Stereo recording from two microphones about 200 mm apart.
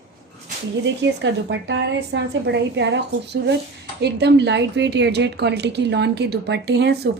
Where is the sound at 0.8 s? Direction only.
60° right (ahead or behind).